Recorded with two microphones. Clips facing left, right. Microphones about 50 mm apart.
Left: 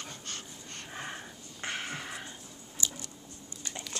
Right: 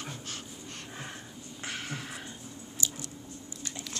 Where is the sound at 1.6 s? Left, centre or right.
Centre.